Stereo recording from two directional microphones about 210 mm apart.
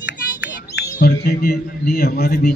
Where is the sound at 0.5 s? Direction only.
50° left (ahead or behind).